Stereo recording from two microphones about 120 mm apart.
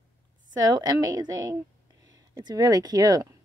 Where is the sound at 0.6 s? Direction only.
35° right (ahead or behind).